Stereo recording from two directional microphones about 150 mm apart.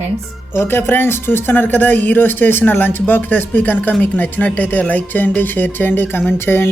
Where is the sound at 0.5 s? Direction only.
15° left (ahead or behind).